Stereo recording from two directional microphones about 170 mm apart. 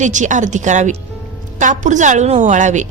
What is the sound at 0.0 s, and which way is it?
Speech, 45° right (ahead or behind).